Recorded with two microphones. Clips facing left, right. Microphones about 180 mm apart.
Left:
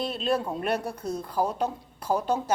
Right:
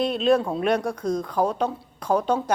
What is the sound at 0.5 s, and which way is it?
A woman's voice, 10° left (ahead or behind).